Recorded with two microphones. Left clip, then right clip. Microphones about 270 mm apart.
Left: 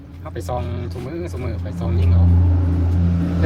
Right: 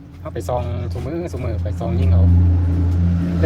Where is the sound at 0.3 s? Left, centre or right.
Centre.